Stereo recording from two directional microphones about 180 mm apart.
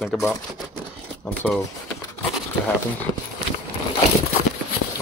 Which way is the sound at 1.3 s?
10° left (ahead or behind).